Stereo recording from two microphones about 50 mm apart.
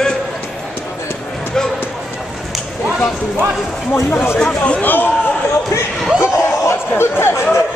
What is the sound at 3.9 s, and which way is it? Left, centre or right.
Speech, left.